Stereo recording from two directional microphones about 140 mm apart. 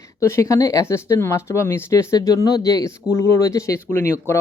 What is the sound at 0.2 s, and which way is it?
Speech, 20° left (ahead or behind).